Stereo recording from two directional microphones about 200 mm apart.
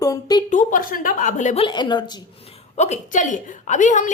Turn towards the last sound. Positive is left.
turn(degrees=40)  # may be behind; listen again after turning